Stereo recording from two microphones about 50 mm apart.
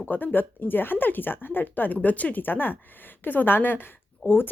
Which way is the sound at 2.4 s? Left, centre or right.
Left.